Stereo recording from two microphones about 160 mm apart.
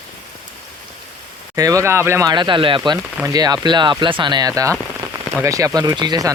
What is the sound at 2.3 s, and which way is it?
Speech, 30° right (ahead or behind).